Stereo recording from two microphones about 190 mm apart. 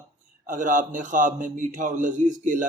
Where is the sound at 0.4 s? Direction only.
45° right (ahead or behind).